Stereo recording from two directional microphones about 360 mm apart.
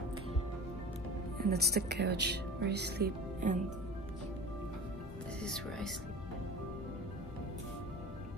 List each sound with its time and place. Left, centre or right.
1.4 s speech: right
5.4 s speech: centre